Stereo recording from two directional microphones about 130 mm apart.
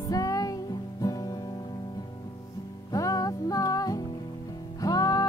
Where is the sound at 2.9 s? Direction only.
25° left (ahead or behind).